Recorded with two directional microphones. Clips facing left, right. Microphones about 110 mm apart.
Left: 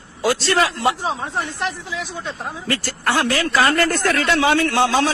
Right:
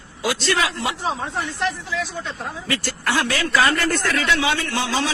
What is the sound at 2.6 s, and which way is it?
Speech, 40° left (ahead or behind).